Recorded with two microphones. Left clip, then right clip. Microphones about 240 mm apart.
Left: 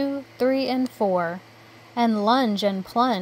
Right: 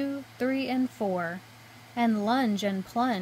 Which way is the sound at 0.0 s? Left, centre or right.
Centre.